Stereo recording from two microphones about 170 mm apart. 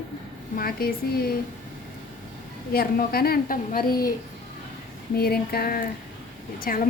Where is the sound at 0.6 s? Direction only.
60° left (ahead or behind).